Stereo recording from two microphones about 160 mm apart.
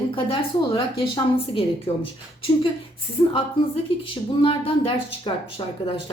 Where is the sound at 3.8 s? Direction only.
35° left (ahead or behind).